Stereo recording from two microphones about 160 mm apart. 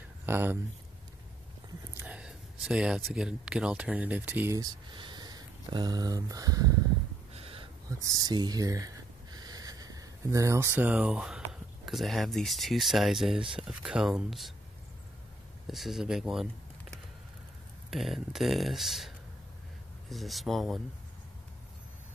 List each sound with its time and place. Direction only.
0.3 s speech: 15° right (ahead or behind)
2.0 s a sound: 5° right (ahead or behind)
3.1 s speech: 5° right (ahead or behind)
4.6 s speech: 25° right (ahead or behind)
7.3 s a sound: 35° right (ahead or behind)
8.0 s speech: 25° right (ahead or behind); by 14.5 s centre (ahead or behind)
15.6 s speech: centre (ahead or behind)
17.8 s speech: centre (ahead or behind)